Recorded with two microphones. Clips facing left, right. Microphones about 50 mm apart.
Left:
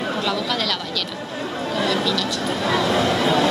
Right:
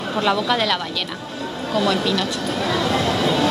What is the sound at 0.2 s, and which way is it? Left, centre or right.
Speech, right.